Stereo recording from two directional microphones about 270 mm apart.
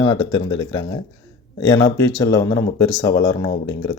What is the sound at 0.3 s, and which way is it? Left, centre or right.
Speech, left.